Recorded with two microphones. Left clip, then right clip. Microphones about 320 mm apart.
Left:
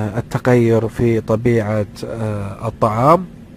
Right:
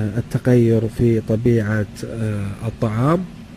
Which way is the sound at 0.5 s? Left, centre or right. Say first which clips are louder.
Left 3 dB; left.